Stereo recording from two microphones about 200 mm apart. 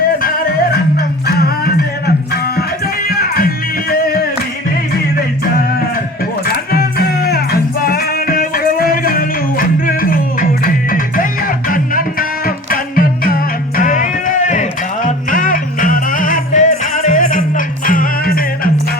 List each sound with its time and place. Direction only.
0.2 s music: 45° left (ahead or behind)
6.4 s music: 50° left (ahead or behind)